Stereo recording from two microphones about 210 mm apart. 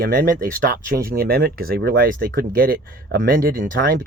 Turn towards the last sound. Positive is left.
turn(degrees=-45)  # may be behind; listen again after turning